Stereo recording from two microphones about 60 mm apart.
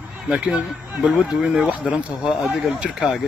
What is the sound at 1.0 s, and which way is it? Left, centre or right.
Speech, centre.